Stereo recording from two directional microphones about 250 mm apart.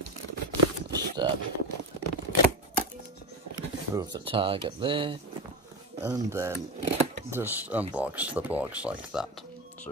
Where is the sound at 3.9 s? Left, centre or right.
Centre.